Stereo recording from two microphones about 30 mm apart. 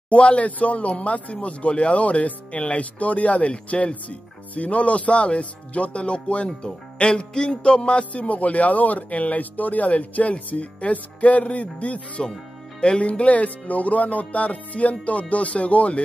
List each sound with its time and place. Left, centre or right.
0.1 s speech: left
3.5 s music: left
3.9 s speech: left
7.3 s music: left
8.0 s speech: left
9.8 s speech: left
12.8 s music: left
13.2 s speech: left